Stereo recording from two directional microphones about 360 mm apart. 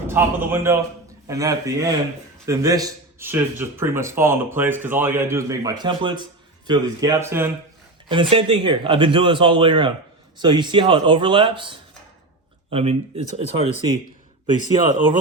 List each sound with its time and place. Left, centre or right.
0.1 s speech: centre